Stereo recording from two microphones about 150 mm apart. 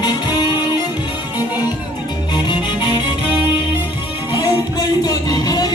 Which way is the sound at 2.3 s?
30° left (ahead or behind).